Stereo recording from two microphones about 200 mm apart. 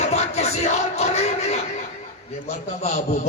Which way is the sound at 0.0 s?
35° left (ahead or behind).